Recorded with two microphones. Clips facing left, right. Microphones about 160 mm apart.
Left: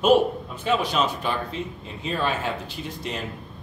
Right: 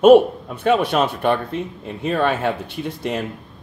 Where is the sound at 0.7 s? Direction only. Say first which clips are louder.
Right 6 dB; 60° right (ahead or behind).